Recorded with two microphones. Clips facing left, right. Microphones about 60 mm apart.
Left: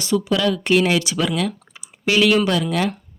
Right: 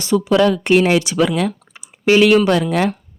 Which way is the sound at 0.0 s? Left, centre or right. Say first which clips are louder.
Right 5 dB; right.